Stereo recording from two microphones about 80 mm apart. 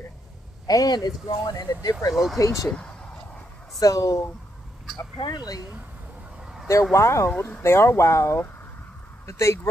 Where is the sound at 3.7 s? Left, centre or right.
Left.